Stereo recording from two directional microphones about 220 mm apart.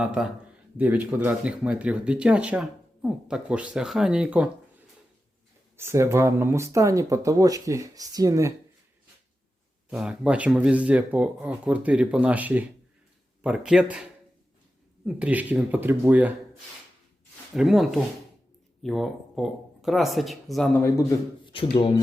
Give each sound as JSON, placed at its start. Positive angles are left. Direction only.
{"t": 0.0, "sound": "speech", "side_deg": -5}
{"t": 5.7, "sound": "speech", "side_deg": -10}
{"t": 9.9, "sound": "speech", "side_deg": -5}
{"t": 15.0, "sound": "speech", "side_deg": -5}
{"t": 17.5, "sound": "speech", "side_deg": 0}
{"t": 21.4, "sound": "speech", "side_deg": 25}